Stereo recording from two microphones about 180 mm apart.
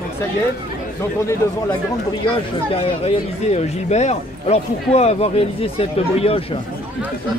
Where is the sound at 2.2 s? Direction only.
30° left (ahead or behind).